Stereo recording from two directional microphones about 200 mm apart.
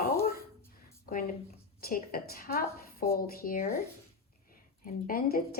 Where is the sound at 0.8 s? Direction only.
45° left (ahead or behind).